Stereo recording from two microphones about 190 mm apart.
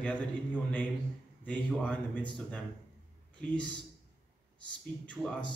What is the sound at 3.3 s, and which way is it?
Speech, 5° left (ahead or behind).